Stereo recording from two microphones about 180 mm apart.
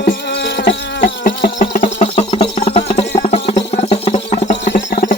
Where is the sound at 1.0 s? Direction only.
50° left (ahead or behind).